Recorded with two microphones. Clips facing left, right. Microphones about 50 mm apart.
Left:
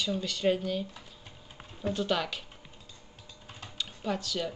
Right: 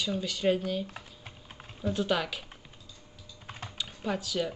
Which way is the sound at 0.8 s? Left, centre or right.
Right.